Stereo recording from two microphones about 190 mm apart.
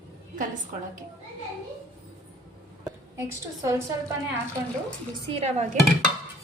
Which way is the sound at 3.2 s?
15° right (ahead or behind).